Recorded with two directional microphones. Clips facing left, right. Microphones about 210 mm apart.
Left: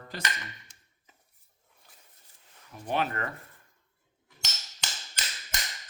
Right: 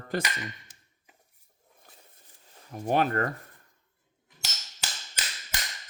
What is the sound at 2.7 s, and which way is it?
Speech, 45° right (ahead or behind).